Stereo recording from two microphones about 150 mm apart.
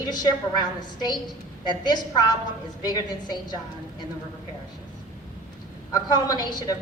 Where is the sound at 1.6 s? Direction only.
30° left (ahead or behind).